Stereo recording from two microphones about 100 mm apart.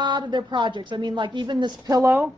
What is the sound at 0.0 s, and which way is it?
A woman's voice, 50° right (ahead or behind).